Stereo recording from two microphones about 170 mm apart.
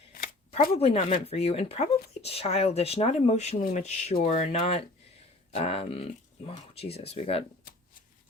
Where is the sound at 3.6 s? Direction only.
50° left (ahead or behind).